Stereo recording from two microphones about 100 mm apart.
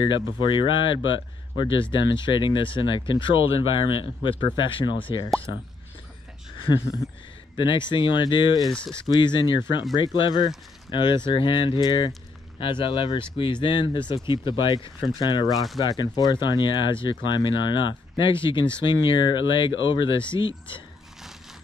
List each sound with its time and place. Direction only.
0.0 s speech: 55° left (ahead or behind)
7.5 s speech: 55° left (ahead or behind)
15.4 s speech: centre (ahead or behind)
15.8 s speech: 40° left (ahead or behind); by 20.8 s 55° left (ahead or behind)